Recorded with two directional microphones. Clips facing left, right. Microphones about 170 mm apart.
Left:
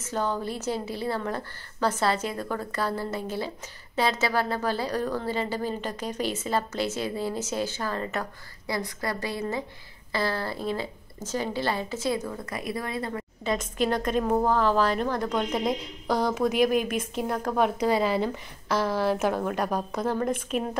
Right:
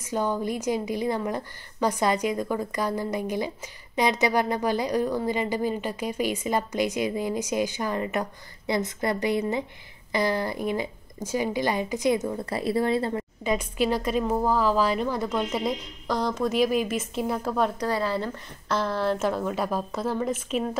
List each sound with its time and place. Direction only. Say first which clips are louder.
0.0 s a woman's voice: right 2 dB; 10° right (ahead or behind); by 13.2 s 30° right (ahead or behind)
13.7 s a woman's voice: even; 5° right (ahead or behind)
17.5 s a woman's voice: left 5 dB; 10° left (ahead or behind)